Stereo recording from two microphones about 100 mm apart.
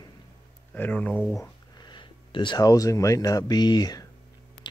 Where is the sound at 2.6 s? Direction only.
35° left (ahead or behind).